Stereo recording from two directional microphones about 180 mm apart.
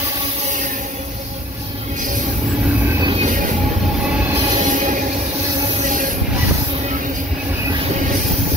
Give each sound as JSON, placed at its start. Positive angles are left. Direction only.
{"t": 3.0, "sound": "music", "side_deg": -30}
{"t": 4.6, "sound": "train", "side_deg": -45}